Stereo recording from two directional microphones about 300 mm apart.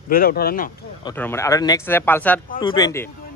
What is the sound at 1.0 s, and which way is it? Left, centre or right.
Speech, centre.